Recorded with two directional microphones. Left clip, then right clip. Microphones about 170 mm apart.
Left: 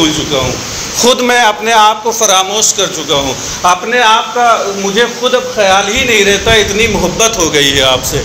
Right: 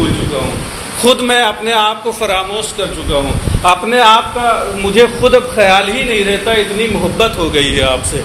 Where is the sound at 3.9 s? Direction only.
60° right (ahead or behind).